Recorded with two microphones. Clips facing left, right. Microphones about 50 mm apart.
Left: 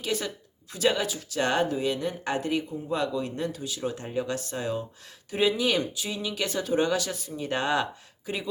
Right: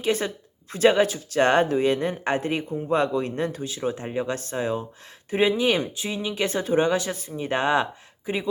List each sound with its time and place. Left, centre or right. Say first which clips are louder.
0.0 s speech: right 6 dB; right